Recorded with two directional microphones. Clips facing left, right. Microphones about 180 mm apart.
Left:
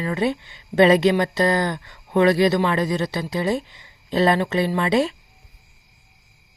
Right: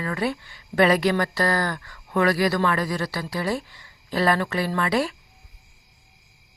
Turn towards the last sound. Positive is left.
turn(degrees=20)  # may be behind; listen again after turning